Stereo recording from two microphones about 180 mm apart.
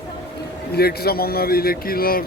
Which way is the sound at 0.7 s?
60° left (ahead or behind).